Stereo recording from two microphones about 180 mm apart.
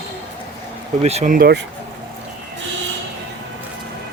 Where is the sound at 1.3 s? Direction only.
60° right (ahead or behind).